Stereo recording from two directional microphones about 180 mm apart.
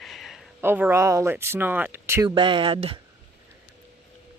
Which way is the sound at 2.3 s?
30° right (ahead or behind).